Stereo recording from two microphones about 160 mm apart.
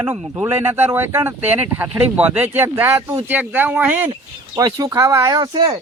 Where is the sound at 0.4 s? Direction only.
15° right (ahead or behind).